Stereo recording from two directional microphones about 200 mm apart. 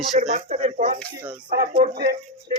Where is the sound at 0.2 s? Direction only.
40° right (ahead or behind).